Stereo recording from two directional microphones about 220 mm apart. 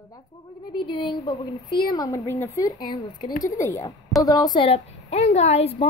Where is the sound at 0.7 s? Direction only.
20° left (ahead or behind).